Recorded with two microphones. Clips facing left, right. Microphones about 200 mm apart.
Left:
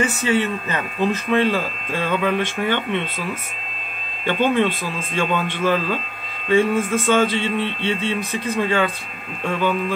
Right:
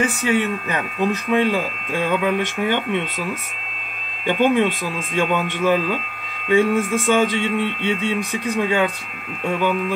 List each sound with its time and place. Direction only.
0.0 s speech: 15° right (ahead or behind)
4.3 s speech: 15° right (ahead or behind)